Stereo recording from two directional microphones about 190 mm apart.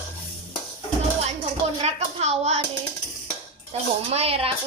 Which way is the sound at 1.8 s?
35° right (ahead or behind).